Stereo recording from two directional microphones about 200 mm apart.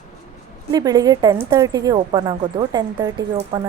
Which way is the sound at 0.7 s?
20° right (ahead or behind).